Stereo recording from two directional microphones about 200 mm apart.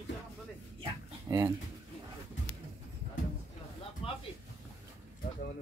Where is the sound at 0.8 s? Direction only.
15° right (ahead or behind).